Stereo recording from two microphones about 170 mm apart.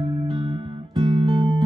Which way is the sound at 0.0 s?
25° right (ahead or behind).